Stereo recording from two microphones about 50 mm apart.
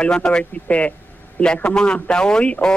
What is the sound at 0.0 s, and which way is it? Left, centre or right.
A man's voice, centre.